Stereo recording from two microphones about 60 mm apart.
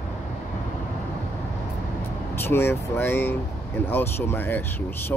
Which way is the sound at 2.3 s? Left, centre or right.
Left.